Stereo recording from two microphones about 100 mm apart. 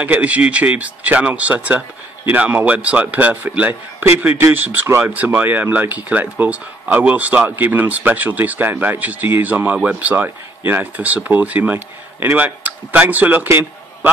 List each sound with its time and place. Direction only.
0.0 s speech: 15° right (ahead or behind)